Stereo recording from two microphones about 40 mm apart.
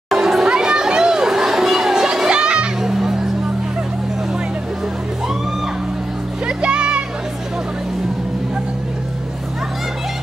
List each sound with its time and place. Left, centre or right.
0.1 s chatter: centre
0.5 s children playing: right
2.8 s music: centre
6.4 s music: right